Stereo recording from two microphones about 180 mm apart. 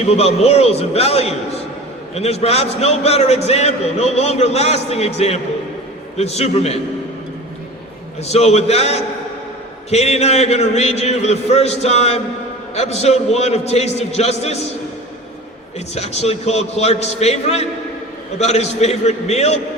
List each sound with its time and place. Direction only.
0.0 s a man's voice: 35° left (ahead or behind)
8.2 s a man's voice: 35° left (ahead or behind)
16.0 s a man's voice: 35° left (ahead or behind)